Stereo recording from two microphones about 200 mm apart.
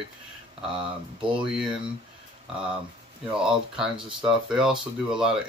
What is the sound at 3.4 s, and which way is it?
Speech, 5° right (ahead or behind).